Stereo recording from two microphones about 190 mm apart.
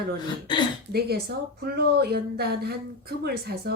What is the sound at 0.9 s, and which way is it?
A woman's voice, 55° right (ahead or behind).